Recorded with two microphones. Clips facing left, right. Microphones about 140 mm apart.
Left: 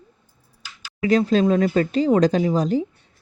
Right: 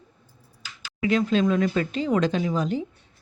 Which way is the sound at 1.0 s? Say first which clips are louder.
Left 4 dB; 40° left (ahead or behind).